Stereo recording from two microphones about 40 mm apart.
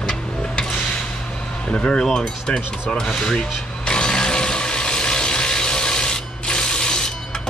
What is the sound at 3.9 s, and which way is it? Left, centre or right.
Mechanisms, centre.